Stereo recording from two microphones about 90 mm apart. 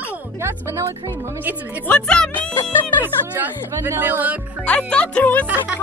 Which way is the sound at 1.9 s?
10° left (ahead or behind).